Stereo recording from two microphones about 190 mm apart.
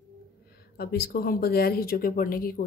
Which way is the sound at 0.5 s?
55° left (ahead or behind).